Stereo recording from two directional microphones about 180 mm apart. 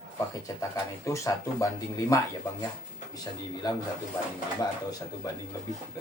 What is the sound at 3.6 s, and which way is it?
Speech, 20° left (ahead or behind).